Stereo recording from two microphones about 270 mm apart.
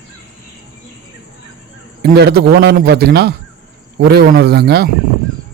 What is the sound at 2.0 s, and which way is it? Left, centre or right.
A man's voice, right.